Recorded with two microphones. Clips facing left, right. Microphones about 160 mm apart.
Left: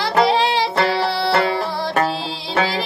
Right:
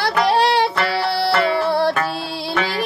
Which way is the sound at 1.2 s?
60° right (ahead or behind).